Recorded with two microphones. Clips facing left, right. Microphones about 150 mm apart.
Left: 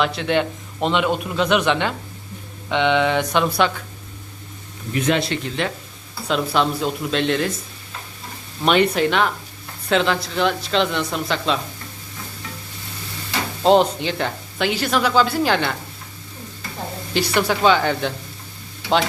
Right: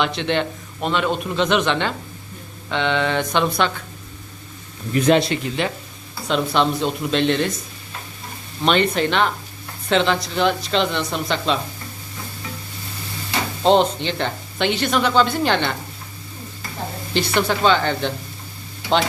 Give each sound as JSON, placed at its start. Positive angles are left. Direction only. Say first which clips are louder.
{"t": 0.0, "sound": "speech", "louder": "left 1 dB", "side_deg": 5}
{"t": 0.8, "sound": "a man's voice", "louder": "left 2 dB", "side_deg": 20}
{"t": 4.9, "sound": "a man's voice", "louder": "right 4 dB", "side_deg": -35}
{"t": 5.6, "sound": "speech", "louder": "right 1 dB", "side_deg": 0}
{"t": 8.6, "sound": "speech", "louder": "left 1 dB", "side_deg": 5}
{"t": 13.6, "sound": "speech", "louder": "left 1 dB", "side_deg": 5}
{"t": 17.2, "sound": "a man's voice", "louder": "even", "side_deg": 10}